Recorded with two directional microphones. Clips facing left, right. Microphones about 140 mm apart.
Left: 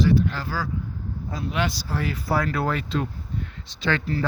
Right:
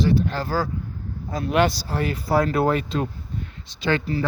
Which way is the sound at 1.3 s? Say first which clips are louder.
Right 7 dB; 50° right (ahead or behind).